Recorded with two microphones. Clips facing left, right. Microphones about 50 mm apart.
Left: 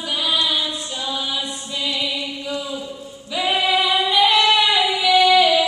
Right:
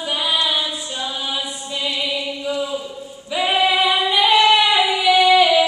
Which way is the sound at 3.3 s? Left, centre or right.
Right.